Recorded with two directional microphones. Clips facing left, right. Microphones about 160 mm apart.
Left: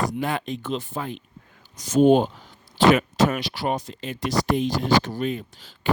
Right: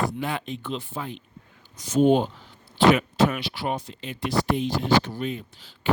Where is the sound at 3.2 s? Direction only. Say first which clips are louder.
Left 2 dB; 40° left (ahead or behind).